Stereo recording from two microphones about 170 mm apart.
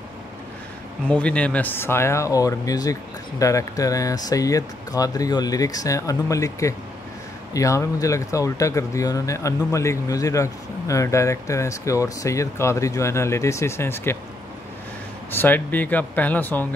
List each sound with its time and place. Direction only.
1.0 s speech: 5° left (ahead or behind)
15.3 s speech: 10° left (ahead or behind)